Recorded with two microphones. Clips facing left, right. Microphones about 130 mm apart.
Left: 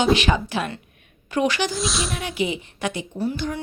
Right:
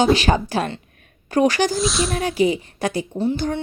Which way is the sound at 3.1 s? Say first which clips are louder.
Right 4 dB; 25° right (ahead or behind).